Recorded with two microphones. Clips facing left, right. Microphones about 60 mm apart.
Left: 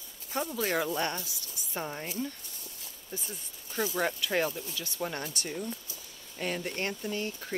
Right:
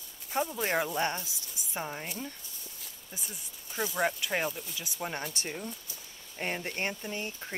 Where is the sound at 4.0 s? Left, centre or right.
Centre.